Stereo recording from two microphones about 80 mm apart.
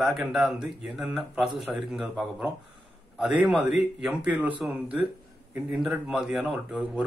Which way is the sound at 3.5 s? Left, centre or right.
Centre.